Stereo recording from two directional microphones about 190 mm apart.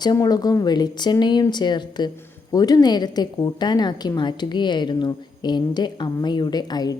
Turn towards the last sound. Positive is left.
turn(degrees=20)  # may be behind; listen again after turning